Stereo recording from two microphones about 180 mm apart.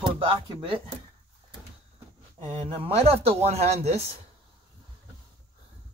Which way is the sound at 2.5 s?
30° right (ahead or behind).